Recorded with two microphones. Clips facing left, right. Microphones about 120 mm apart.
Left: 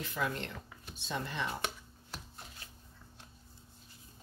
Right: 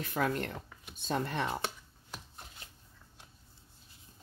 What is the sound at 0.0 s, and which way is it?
Speech, 50° right (ahead or behind).